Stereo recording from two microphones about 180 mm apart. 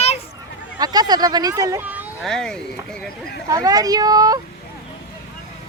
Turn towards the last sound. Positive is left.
turn(degrees=-20)  # may be behind; listen again after turning